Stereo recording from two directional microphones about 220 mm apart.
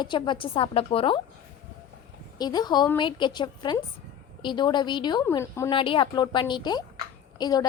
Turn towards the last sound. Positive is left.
turn(degrees=15)  # may be behind; listen again after turning